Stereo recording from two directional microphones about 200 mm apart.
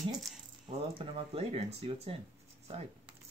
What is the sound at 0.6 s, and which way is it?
Speech, 25° right (ahead or behind).